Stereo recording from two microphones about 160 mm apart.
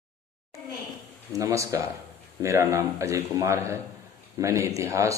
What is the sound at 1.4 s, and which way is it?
Speech, 20° right (ahead or behind).